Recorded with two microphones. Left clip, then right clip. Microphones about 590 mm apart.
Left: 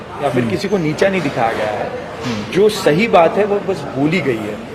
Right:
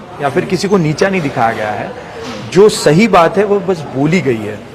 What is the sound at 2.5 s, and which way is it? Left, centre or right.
A man's voice, right.